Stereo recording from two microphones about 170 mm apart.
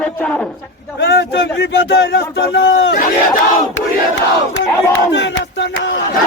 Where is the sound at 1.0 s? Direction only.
75° left (ahead or behind).